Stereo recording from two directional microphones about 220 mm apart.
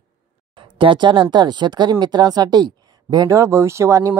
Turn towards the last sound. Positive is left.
turn(degrees=-15)  # may be behind; listen again after turning